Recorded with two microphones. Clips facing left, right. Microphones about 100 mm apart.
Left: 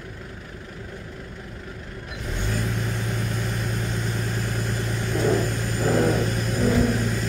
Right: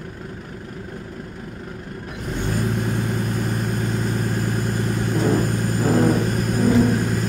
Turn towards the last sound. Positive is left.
turn(degrees=-45)  # may be behind; listen again after turning